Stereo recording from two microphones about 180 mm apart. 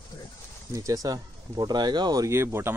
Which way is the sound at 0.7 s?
20° right (ahead or behind).